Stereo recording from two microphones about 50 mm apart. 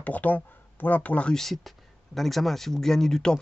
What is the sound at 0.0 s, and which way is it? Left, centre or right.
Speech, left.